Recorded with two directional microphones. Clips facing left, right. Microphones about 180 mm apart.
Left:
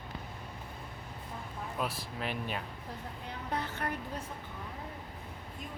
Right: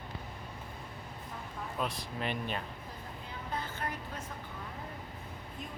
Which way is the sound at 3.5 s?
70° left (ahead or behind).